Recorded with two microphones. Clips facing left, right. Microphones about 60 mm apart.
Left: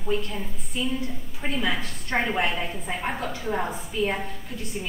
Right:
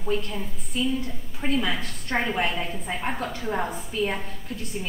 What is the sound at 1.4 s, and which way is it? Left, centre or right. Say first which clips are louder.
A woman's voice: right 1 dB; centre.